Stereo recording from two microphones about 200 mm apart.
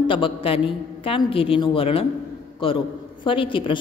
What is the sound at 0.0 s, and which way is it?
A woman's voice, 25° left (ahead or behind).